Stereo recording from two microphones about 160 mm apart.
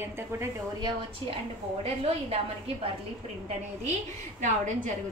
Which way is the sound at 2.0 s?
40° right (ahead or behind).